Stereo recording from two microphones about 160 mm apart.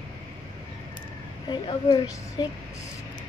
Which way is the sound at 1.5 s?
30° left (ahead or behind).